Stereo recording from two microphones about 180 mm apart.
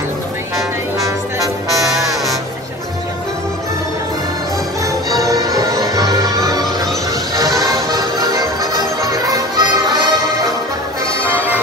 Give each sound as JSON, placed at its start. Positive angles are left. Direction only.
{"t": 4.8, "sound": "music", "side_deg": -20}
{"t": 11.2, "sound": "music", "side_deg": -10}